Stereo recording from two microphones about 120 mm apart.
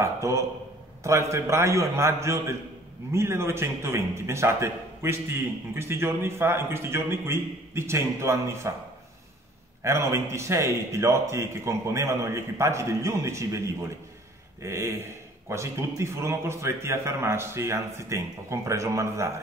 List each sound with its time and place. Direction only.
0.0 s a man's voice: 25° right (ahead or behind)
9.8 s a man's voice: 25° right (ahead or behind)